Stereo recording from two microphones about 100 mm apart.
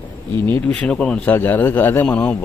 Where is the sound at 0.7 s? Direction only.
10° left (ahead or behind).